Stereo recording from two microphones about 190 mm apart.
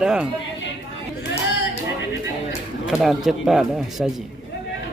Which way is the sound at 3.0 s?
Centre (ahead or behind).